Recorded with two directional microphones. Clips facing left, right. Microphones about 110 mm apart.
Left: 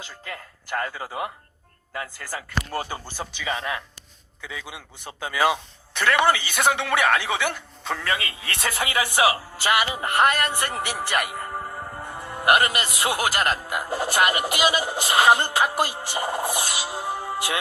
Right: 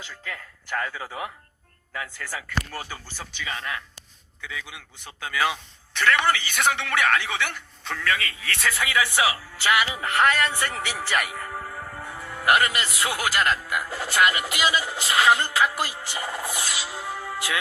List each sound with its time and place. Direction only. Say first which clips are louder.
0.3 s speech: left 1 dB; 10° left (ahead or behind)
3.4 s speech: left 4 dB; 15° left (ahead or behind)
7.9 s speech: right 2 dB; 25° left (ahead or behind)
8.7 s speech: left 1 dB; 45° left (ahead or behind)
10.2 s a man's voice: left 1 dB; 10° left (ahead or behind)
13.1 s speech: right 1 dB; 40° left (ahead or behind)